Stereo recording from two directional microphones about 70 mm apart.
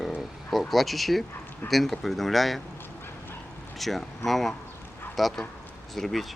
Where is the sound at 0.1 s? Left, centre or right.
Centre.